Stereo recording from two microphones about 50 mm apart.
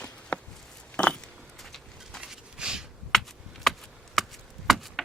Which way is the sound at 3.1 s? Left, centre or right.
Centre.